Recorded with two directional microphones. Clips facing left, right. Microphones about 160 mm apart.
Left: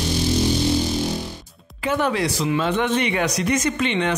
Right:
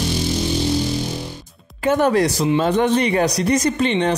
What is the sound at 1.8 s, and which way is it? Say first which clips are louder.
Speech: right 5 dB; 45° right (ahead or behind).